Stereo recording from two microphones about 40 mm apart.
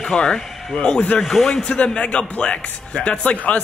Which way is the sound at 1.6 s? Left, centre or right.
Left.